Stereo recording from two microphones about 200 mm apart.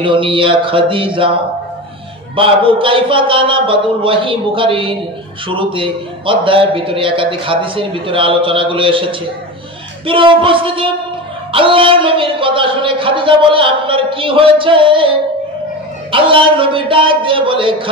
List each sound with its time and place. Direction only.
0.0 s speech: 25° right (ahead or behind)